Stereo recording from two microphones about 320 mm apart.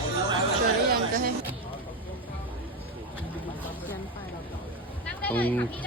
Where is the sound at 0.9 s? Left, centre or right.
Right.